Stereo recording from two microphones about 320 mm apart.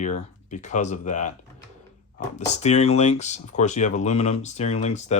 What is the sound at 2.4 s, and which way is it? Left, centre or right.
Speech, left.